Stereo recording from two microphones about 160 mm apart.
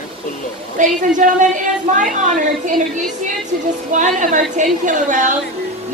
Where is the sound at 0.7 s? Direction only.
55° right (ahead or behind).